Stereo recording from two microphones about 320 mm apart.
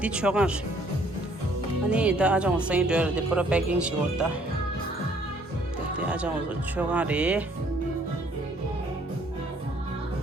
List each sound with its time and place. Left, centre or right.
0.0 s speech: centre
1.9 s speech: centre
6.0 s speech: centre